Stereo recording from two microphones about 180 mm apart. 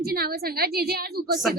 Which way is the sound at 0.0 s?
60° right (ahead or behind).